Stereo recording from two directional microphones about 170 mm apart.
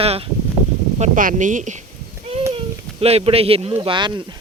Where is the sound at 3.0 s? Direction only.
35° right (ahead or behind).